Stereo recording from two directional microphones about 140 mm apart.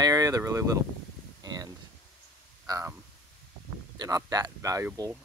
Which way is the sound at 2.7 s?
25° right (ahead or behind).